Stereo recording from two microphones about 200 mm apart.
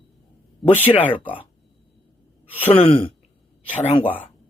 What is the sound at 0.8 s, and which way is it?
Speech, 25° left (ahead or behind).